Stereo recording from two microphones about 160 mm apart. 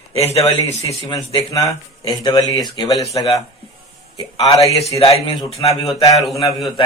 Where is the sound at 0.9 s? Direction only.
25° left (ahead or behind).